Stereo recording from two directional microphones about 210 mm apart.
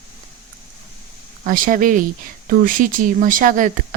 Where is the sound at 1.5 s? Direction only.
40° right (ahead or behind).